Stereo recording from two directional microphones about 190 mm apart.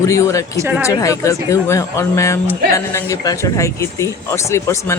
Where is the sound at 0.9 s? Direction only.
15° left (ahead or behind).